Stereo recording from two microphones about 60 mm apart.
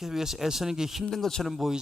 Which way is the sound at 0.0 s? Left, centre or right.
Centre.